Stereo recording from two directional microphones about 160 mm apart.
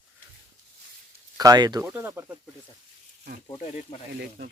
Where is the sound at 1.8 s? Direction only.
10° right (ahead or behind).